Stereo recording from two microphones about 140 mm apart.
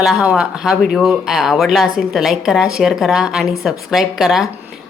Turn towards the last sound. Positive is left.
turn(degrees=0)  # may be behind; listen again after turning